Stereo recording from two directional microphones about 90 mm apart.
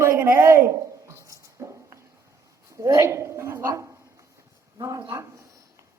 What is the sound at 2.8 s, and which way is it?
A woman's voice, 35° right (ahead or behind).